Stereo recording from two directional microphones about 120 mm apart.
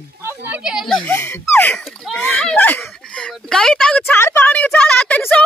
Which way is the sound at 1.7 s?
5° left (ahead or behind).